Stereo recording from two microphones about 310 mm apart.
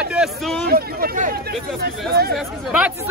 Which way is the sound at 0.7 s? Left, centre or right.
Right.